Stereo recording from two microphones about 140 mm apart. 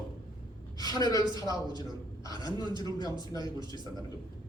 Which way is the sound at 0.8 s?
30° left (ahead or behind).